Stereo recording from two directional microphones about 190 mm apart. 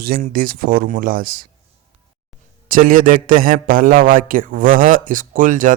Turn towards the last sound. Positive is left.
turn(degrees=-45)  # may be behind; listen again after turning